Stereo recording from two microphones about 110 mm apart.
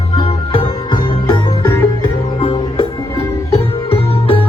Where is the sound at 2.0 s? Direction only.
50° left (ahead or behind).